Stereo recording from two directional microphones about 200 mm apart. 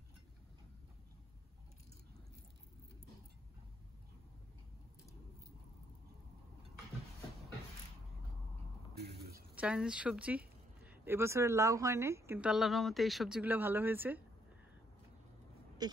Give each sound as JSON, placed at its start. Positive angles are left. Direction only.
{"t": 9.0, "sound": "a sound", "side_deg": -55}
{"t": 9.6, "sound": "speech", "side_deg": -5}
{"t": 15.8, "sound": "speech", "side_deg": -20}